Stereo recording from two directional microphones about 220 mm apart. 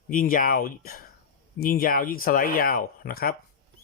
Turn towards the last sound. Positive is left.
turn(degrees=40)  # may be behind; listen again after turning